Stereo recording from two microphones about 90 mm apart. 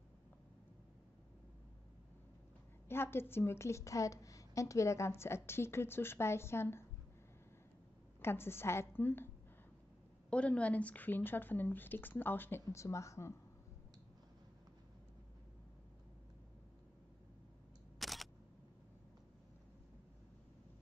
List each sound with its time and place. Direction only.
2.9 s a woman's voice: 25° left (ahead or behind)
8.2 s a woman's voice: 25° left (ahead or behind)
10.3 s a woman's voice: 15° left (ahead or behind); by 13.3 s 35° left (ahead or behind)
17.9 s single-lens reflex camera: centre (ahead or behind)